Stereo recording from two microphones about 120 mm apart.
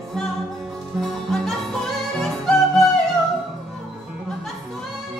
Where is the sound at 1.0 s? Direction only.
Centre (ahead or behind).